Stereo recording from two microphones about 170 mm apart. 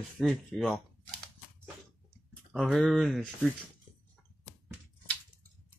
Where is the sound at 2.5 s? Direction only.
Centre (ahead or behind).